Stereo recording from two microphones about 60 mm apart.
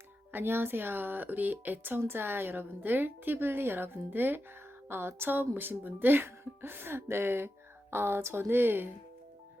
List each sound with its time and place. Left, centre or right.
0.3 s speech: right